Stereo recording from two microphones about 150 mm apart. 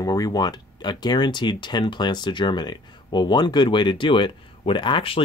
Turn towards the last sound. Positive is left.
turn(degrees=35)  # may be behind; listen again after turning